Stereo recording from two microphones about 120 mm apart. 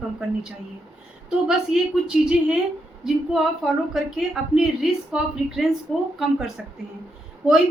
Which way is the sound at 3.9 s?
5° right (ahead or behind).